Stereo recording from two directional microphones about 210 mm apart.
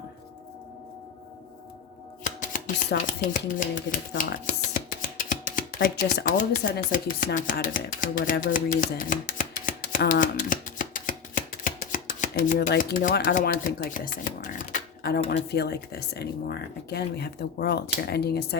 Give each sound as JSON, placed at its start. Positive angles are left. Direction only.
{"t": 3.1, "sound": "speech", "side_deg": 40}
{"t": 4.2, "sound": "chopping", "side_deg": 40}
{"t": 12.3, "sound": "speech", "side_deg": 45}